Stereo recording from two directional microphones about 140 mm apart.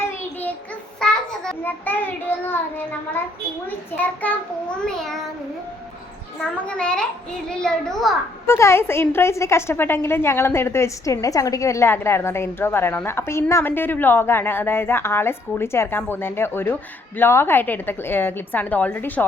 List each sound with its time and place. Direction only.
0.9 s a child's voice: 5° left (ahead or behind)
6.7 s a woman's voice: 5° left (ahead or behind)
8.4 s a woman's voice: 20° left (ahead or behind)